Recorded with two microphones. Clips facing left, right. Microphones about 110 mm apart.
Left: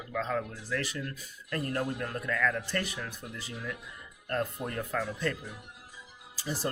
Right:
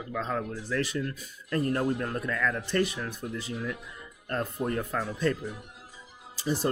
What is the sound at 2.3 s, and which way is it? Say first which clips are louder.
Speech: left 1 dB; 20° right (ahead or behind).